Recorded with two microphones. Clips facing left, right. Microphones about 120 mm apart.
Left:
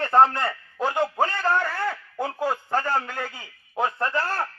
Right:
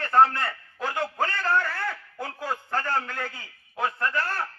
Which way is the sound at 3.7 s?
25° left (ahead or behind).